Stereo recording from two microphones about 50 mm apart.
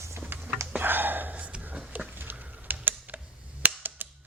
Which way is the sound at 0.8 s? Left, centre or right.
Right.